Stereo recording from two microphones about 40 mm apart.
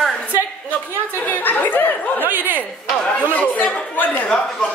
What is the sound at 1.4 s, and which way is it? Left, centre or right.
Speech, left.